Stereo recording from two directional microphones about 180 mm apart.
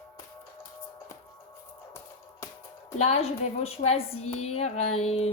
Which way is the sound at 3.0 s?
35° left (ahead or behind).